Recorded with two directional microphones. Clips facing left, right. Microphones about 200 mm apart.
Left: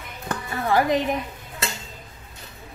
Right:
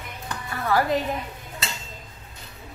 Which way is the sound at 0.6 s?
20° left (ahead or behind).